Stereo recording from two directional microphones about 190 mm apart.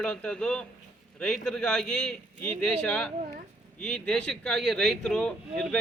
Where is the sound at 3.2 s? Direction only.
45° right (ahead or behind).